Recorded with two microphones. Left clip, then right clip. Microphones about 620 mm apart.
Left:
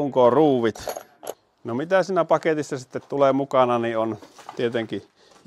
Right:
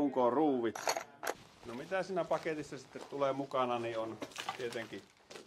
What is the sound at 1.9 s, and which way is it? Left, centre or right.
Speech, left.